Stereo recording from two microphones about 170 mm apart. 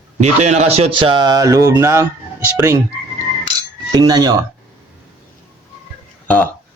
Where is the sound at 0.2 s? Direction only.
40° right (ahead or behind); by 2.8 s 20° right (ahead or behind).